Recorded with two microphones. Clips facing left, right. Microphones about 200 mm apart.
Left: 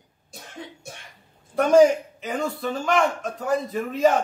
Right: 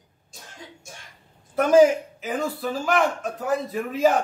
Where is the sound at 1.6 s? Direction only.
Centre (ahead or behind).